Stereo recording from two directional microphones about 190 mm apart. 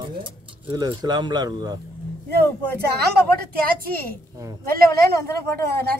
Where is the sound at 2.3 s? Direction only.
55° right (ahead or behind).